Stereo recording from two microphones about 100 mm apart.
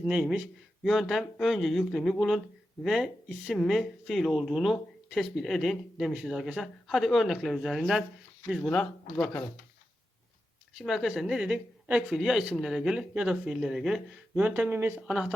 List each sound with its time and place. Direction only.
0.0 s speech: 10° right (ahead or behind); by 9.5 s 15° left (ahead or behind)
10.8 s speech: 5° right (ahead or behind); by 15.0 s 20° right (ahead or behind)
15.0 s speech: 10° right (ahead or behind)